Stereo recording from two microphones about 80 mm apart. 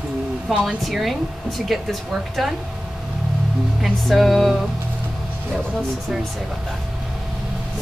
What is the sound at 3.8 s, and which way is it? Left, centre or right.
Speech, centre.